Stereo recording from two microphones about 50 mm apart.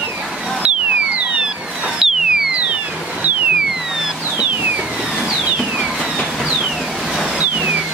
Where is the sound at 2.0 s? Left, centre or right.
Centre.